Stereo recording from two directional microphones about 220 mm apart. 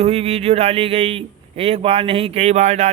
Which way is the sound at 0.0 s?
30° right (ahead or behind).